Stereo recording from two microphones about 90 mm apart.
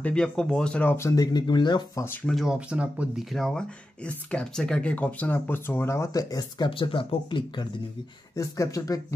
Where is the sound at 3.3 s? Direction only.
Centre (ahead or behind).